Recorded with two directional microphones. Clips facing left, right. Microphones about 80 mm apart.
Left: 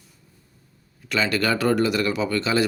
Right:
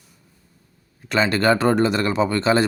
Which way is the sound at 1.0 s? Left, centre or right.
Right.